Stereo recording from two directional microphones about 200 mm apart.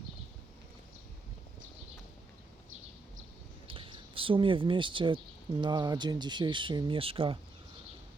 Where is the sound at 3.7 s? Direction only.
25° right (ahead or behind).